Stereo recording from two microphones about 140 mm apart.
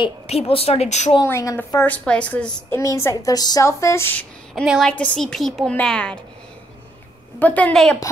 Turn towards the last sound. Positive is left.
turn(degrees=5)  # may be behind; listen again after turning